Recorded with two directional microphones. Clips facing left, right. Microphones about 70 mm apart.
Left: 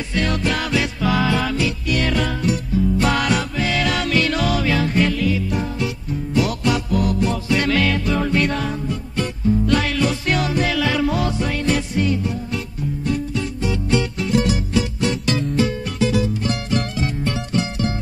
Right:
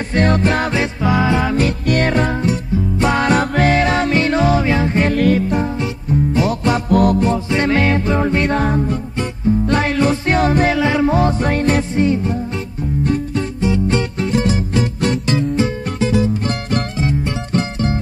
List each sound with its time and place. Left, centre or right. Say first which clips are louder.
0.1 s music: right 6 dB; right
1.6 s music: right 5 dB; right
2.1 s music: right 4 dB; right
3.3 s music: right 7 dB; right
3.8 s music: right 4 dB; right
5.1 s music: right 6 dB; right
6.9 s music: right 7 dB; right
7.2 s music: right 3 dB; right
15.2 s music: right 3 dB; right
17.5 s music: right 5 dB; right